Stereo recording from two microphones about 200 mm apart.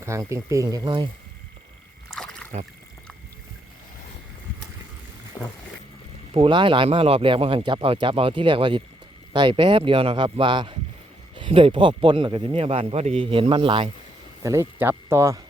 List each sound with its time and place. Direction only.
0.0 s speech: 15° right (ahead or behind)
2.0 s rowboat: 5° left (ahead or behind)
5.4 s vehicle: 10° left (ahead or behind)
6.3 s speech: 25° right (ahead or behind)
14.4 s speech: 15° right (ahead or behind)